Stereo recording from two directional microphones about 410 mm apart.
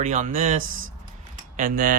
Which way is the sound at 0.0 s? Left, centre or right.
Centre.